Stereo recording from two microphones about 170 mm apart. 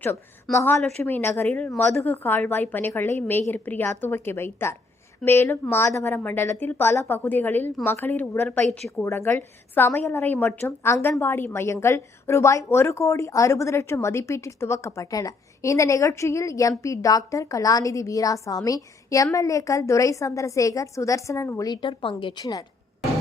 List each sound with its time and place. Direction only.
0.5 s a woman's voice: 10° left (ahead or behind)